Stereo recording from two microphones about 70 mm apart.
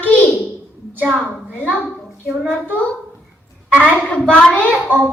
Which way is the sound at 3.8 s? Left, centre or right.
Centre.